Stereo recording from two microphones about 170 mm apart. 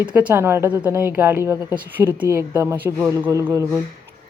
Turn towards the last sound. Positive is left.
turn(degrees=-20)  # may be behind; listen again after turning